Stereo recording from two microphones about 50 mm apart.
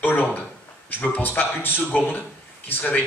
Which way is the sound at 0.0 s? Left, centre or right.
Left.